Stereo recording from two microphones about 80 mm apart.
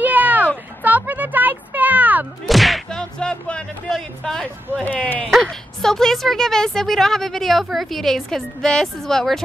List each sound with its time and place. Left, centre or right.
0.0 s a sound: right
0.8 s music: right
2.4 s speech: centre
4.8 s speech: centre
5.3 s speech: centre